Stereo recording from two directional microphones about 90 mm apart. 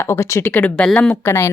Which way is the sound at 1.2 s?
30° left (ahead or behind).